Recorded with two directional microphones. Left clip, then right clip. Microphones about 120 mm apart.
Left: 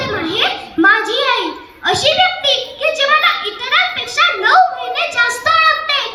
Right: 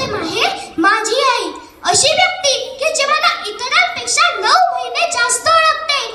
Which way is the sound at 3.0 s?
25° right (ahead or behind).